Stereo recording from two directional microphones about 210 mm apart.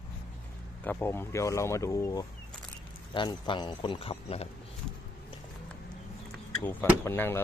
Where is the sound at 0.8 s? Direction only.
10° left (ahead or behind); by 4.4 s 30° left (ahead or behind).